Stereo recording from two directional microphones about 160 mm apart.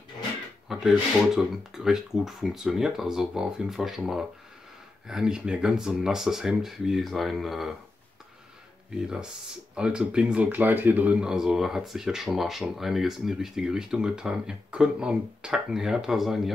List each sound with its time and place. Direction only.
0.7 s speech: 5° right (ahead or behind)
8.9 s speech: 5° right (ahead or behind)